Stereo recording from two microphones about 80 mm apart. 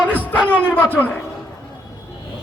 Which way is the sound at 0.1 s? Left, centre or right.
Left.